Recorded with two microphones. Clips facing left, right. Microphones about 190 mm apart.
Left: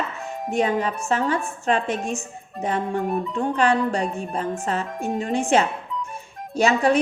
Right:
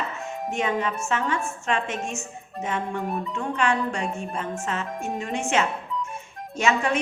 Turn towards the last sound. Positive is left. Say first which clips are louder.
# left 5 dB
turn(degrees=35)  # may be behind; listen again after turning